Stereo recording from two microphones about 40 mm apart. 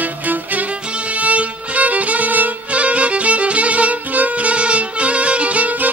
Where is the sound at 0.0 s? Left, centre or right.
Right.